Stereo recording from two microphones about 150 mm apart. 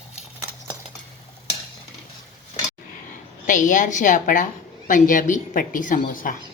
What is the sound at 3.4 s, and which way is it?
A woman's voice, 60° left (ahead or behind).